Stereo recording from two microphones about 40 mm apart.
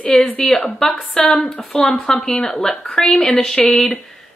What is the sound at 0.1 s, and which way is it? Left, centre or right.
A woman's voice, centre.